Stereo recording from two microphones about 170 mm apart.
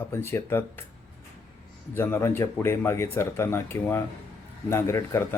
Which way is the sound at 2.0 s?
15° left (ahead or behind).